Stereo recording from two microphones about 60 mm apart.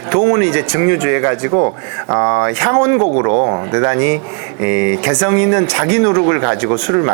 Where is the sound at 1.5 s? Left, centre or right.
Right.